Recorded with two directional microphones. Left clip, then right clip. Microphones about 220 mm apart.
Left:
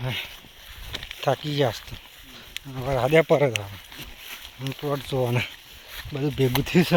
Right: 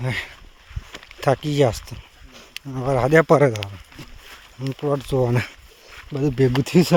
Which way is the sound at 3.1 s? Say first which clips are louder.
Right 4 dB; 50° right (ahead or behind).